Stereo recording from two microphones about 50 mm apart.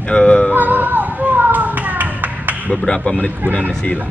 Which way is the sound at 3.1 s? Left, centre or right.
Left.